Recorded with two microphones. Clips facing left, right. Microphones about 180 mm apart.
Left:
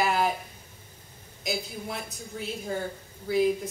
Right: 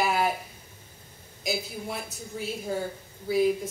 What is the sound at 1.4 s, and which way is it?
A woman's voice, 5° right (ahead or behind).